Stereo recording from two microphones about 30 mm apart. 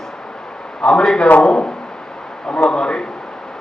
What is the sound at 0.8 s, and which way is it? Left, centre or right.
A man's voice, left.